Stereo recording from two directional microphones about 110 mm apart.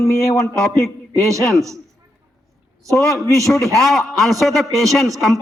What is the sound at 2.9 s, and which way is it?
Speech, 30° right (ahead or behind).